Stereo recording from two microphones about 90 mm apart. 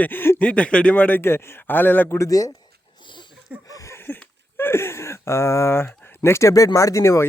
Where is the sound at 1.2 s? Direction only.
30° left (ahead or behind).